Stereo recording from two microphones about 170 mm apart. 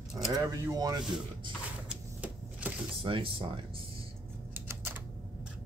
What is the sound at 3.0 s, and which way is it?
Speech, 30° right (ahead or behind).